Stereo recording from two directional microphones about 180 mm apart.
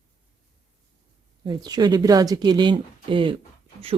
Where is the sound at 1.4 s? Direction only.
20° right (ahead or behind).